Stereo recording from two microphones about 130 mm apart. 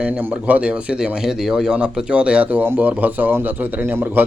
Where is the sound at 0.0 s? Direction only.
10° right (ahead or behind).